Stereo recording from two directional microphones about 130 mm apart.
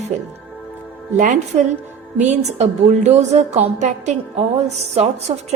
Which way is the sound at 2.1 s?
65° right (ahead or behind).